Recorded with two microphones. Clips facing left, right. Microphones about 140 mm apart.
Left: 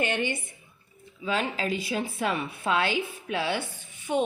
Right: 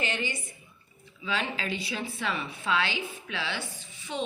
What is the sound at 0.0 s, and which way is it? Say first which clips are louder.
Speech: left 5 dB; 55° left (ahead or behind).